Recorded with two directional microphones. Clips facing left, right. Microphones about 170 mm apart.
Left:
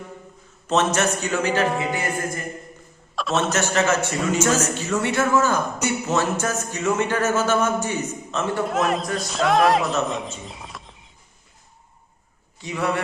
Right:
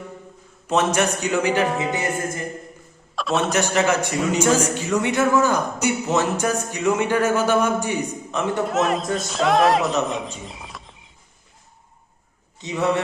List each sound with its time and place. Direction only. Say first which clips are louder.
0.7 s a man's voice: right 1 dB; 10° right (ahead or behind)
1.8 s a capella: right 1 dB; 20° right (ahead or behind)
3.2 s a sound: right 1 dB; centre (ahead or behind)
3.5 s a man's voice: right 2 dB; 15° right (ahead or behind)
8.6 s a woman's voice: right 1 dB; centre (ahead or behind)
12.5 s a man's voice: right 3 dB; 20° right (ahead or behind)